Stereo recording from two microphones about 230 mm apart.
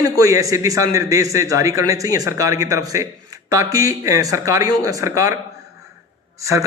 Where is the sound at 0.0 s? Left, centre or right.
Centre.